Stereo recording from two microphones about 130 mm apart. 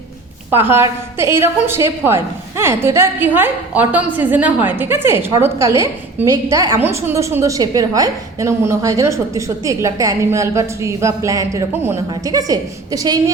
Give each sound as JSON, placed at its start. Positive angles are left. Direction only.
{"t": 0.5, "sound": "a woman's voice", "side_deg": -15}